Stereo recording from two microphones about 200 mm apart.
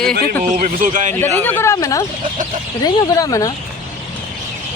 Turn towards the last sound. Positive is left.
turn(degrees=20)  # may be behind; listen again after turning